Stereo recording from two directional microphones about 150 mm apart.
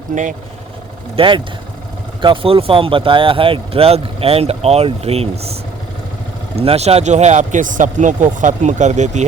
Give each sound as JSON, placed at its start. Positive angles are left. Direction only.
{"t": 0.1, "sound": "speech", "side_deg": -55}
{"t": 1.1, "sound": "speech", "side_deg": -35}
{"t": 6.6, "sound": "speech", "side_deg": -45}